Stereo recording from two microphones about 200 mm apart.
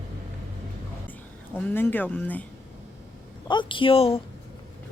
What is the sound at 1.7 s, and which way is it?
Speech, 10° left (ahead or behind).